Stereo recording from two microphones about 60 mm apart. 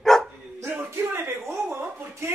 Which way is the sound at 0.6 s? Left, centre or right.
Right.